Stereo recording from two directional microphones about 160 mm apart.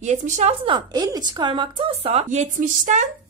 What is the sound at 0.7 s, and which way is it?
A woman's voice, 25° right (ahead or behind).